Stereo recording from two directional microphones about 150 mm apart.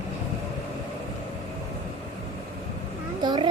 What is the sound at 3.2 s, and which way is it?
Vehicle, 30° right (ahead or behind).